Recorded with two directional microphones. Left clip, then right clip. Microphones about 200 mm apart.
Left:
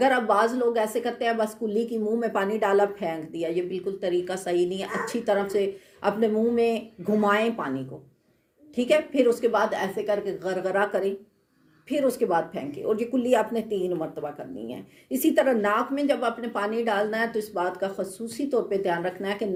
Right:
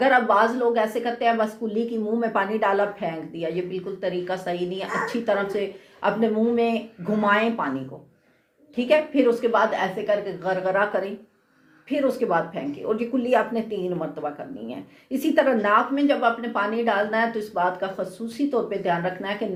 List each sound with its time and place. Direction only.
0.0 s a woman's voice: 45° left (ahead or behind)
8.7 s a woman's voice: 45° left (ahead or behind)